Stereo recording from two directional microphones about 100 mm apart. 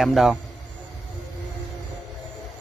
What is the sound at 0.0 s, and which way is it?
Speech, centre (ahead or behind).